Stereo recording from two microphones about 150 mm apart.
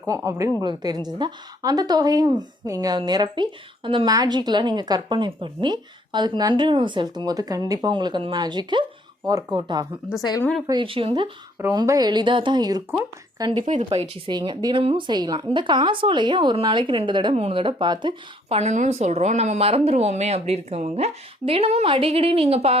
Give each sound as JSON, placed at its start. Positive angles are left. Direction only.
{"t": 0.0, "sound": "a woman's voice", "side_deg": -20}
{"t": 10.2, "sound": "speech", "side_deg": 30}
{"t": 10.7, "sound": "a woman's voice", "side_deg": -35}
{"t": 13.7, "sound": "a woman's voice", "side_deg": -55}
{"t": 14.3, "sound": "a woman's voice", "side_deg": -30}
{"t": 18.4, "sound": "a woman's voice", "side_deg": -45}